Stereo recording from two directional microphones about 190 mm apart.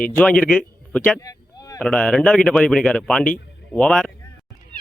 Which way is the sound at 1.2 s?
20° left (ahead or behind).